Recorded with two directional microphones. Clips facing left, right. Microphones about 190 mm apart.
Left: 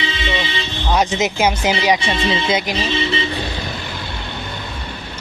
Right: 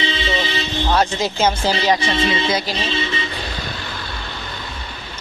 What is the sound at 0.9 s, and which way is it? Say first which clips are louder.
Speech: left 3 dB; 15° left (ahead or behind).